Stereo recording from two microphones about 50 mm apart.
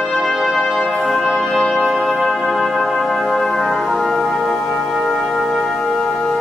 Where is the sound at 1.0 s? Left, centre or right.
Centre.